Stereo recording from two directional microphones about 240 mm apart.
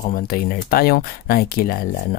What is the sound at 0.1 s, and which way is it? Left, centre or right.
Speech, left.